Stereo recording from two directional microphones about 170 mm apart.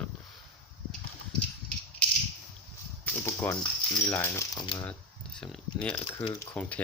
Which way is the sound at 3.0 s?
15° left (ahead or behind).